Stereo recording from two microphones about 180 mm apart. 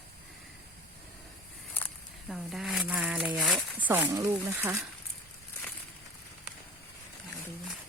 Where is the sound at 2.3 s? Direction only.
Centre (ahead or behind).